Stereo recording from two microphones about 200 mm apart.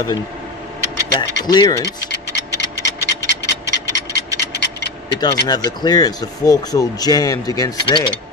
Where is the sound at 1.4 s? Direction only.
20° left (ahead or behind).